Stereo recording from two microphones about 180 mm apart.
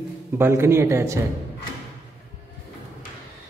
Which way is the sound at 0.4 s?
15° right (ahead or behind).